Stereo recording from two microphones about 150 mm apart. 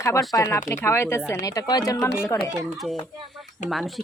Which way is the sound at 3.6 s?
Centre (ahead or behind).